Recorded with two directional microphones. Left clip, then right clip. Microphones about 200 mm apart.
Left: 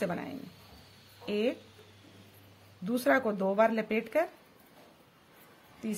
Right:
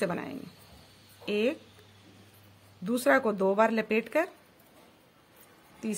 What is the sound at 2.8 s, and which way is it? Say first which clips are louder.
Speech: right 3 dB; 20° right (ahead or behind).